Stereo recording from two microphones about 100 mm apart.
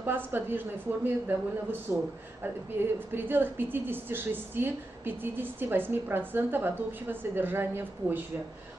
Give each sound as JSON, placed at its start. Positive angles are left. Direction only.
{"t": 0.0, "sound": "a woman's voice", "side_deg": -20}
{"t": 2.8, "sound": "a woman's voice", "side_deg": -20}